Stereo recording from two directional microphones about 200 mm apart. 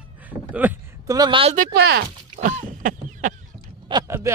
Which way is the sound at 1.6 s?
50° right (ahead or behind).